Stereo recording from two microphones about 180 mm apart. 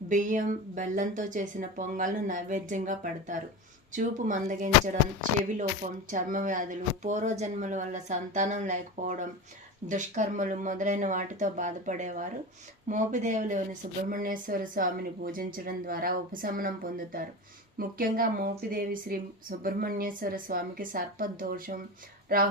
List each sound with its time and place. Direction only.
0.1 s speech: 45° right (ahead or behind)